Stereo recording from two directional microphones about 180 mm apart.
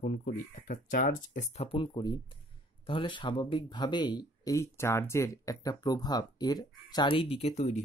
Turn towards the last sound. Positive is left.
turn(degrees=40)  # may be behind; listen again after turning